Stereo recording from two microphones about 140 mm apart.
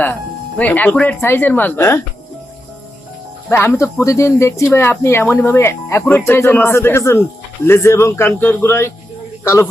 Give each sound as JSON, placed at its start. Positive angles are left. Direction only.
{"t": 0.6, "sound": "speech", "side_deg": 10}
{"t": 3.5, "sound": "a man's voice", "side_deg": 15}